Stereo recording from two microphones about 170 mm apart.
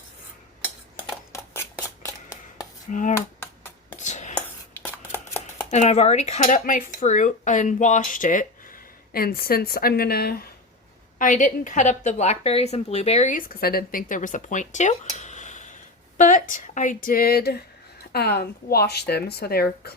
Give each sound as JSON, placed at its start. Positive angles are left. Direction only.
{"t": 0.6, "sound": "a sound", "side_deg": 10}
{"t": 2.9, "sound": "a woman's voice", "side_deg": 50}
{"t": 3.2, "sound": "computer keyboard", "side_deg": 15}
{"t": 3.9, "sound": "chopping", "side_deg": 45}
{"t": 4.4, "sound": "a sound", "side_deg": 10}
{"t": 5.7, "sound": "a woman's voice", "side_deg": 40}
{"t": 9.1, "sound": "a woman's voice", "side_deg": 60}
{"t": 11.2, "sound": "a woman's voice", "side_deg": 50}